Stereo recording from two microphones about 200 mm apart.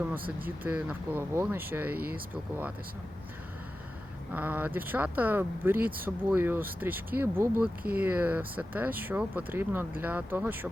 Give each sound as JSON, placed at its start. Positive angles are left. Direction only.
{"t": 0.6, "sound": "speech", "side_deg": -5}
{"t": 4.3, "sound": "speech", "side_deg": -10}